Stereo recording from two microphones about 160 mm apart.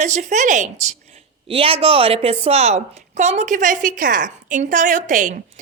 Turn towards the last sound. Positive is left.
turn(degrees=-55)  # may be behind; listen again after turning